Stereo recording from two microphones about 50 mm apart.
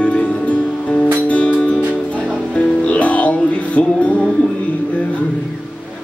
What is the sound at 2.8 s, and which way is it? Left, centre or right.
Music, left.